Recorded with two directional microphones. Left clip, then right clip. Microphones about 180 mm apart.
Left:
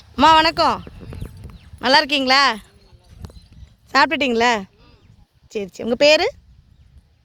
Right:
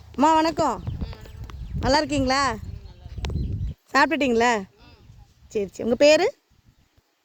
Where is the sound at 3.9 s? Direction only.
10° right (ahead or behind).